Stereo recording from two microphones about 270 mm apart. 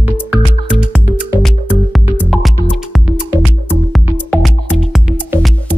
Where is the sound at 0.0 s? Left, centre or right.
Centre.